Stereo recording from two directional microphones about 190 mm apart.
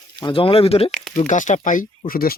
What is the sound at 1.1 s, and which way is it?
Speech, 40° left (ahead or behind).